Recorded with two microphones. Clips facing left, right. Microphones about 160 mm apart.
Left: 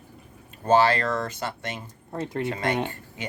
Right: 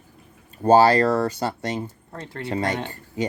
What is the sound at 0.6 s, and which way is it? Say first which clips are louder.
Speech: right 5 dB; 35° right (ahead or behind).